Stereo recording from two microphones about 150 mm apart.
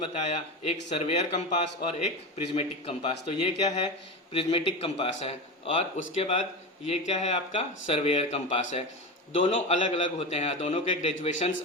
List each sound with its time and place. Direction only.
0.1 s a man's voice: 45° left (ahead or behind)
2.6 s a man's voice: 40° left (ahead or behind)